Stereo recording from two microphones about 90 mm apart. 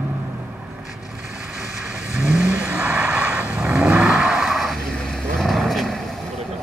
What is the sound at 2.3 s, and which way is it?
Vehicle, 10° right (ahead or behind).